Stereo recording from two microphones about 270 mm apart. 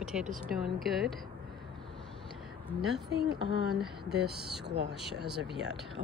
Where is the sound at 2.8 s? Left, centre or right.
Centre.